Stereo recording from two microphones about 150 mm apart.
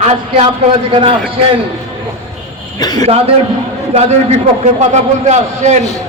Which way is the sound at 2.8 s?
25° left (ahead or behind).